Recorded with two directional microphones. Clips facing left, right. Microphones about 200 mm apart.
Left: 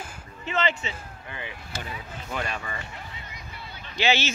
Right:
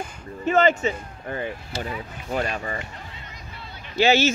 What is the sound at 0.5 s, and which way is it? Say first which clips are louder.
Speech: right 9 dB; 45° right (ahead or behind).